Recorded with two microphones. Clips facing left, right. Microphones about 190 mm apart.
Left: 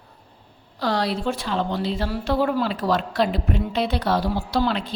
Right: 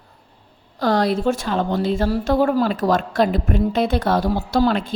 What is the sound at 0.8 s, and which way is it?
Speech, 50° right (ahead or behind).